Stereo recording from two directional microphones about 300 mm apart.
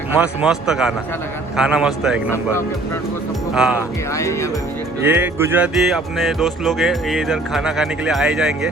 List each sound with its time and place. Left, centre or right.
0.2 s speech: centre
3.5 s speech: centre
4.1 s speech: centre
5.0 s speech: centre